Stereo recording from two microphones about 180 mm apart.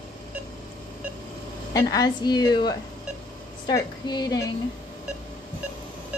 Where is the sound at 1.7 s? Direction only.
20° left (ahead or behind).